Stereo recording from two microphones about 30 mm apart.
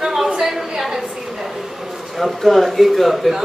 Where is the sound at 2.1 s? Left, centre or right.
Centre.